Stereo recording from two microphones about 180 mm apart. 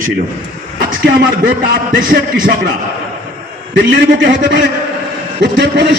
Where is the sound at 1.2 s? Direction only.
50° right (ahead or behind).